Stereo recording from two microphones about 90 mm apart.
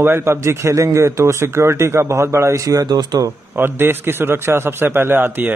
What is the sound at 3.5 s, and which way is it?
A man's voice, 25° right (ahead or behind).